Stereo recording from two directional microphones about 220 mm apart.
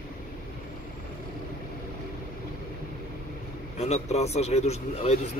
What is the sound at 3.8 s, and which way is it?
A man's voice, 30° left (ahead or behind).